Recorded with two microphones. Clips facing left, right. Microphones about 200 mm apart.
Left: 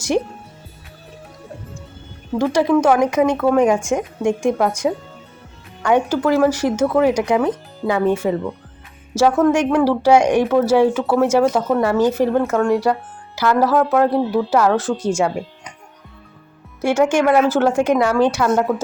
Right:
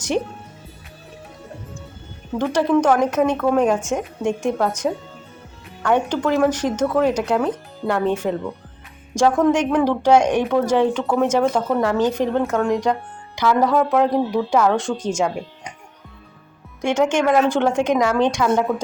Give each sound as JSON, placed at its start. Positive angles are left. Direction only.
{"t": 2.4, "sound": "speech", "side_deg": 10}
{"t": 16.8, "sound": "speech", "side_deg": 10}